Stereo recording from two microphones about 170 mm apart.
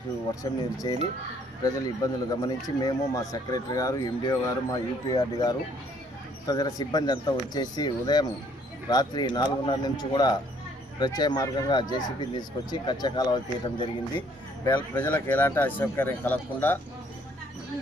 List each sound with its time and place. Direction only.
0.4 s speech: 20° left (ahead or behind)
14.9 s speech: 10° left (ahead or behind)